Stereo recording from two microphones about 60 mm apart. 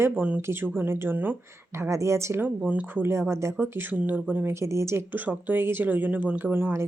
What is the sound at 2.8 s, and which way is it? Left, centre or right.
Speech, right.